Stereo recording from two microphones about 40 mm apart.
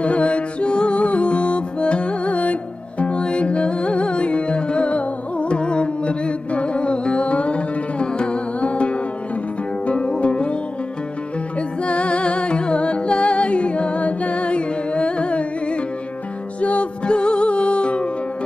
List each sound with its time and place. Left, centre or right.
0.0 s music: left